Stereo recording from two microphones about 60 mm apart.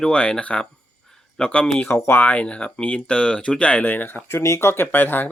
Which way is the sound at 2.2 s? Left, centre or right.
Left.